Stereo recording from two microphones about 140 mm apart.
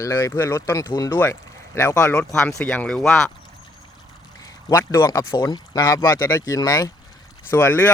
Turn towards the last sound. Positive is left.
turn(degrees=15)  # may be behind; listen again after turning